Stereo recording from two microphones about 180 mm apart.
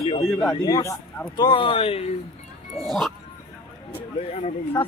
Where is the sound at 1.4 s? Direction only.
30° left (ahead or behind).